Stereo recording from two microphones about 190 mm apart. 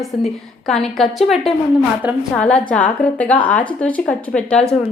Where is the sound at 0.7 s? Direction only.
Centre (ahead or behind).